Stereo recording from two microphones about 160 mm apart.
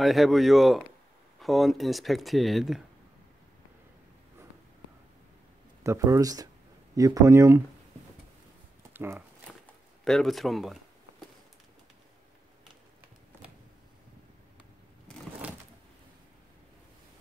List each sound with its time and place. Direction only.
0.0 s speech: centre (ahead or behind)
5.9 s speech: 20° right (ahead or behind)
8.9 s speech: 15° right (ahead or behind)
10.0 s a sound: centre (ahead or behind)